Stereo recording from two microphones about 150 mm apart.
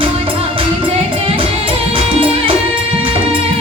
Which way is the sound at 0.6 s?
35° right (ahead or behind).